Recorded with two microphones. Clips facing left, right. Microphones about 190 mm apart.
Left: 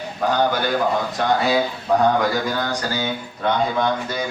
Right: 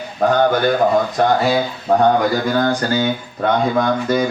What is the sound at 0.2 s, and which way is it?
Speech, 45° right (ahead or behind).